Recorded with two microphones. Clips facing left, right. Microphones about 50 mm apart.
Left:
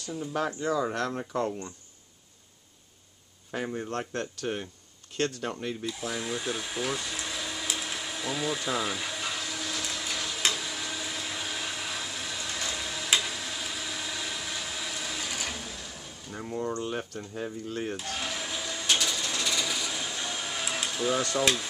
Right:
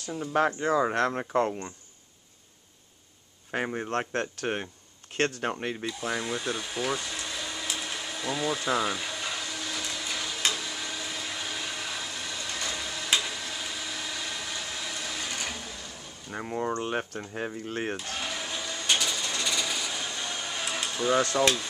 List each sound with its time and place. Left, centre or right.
0.3 s speech: right
3.5 s speech: right
6.1 s a sound: centre
16.3 s speech: right
18.1 s a sound: centre
21.4 s speech: centre